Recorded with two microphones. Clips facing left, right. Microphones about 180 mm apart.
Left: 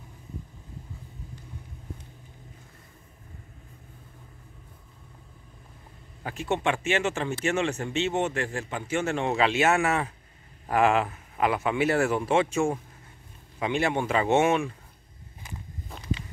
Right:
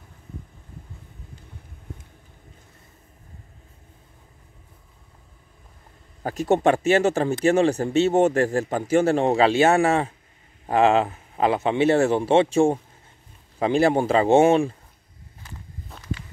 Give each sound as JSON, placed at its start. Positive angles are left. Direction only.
{"t": 6.2, "sound": "a man's voice", "side_deg": -40}
{"t": 15.4, "sound": "walk", "side_deg": 15}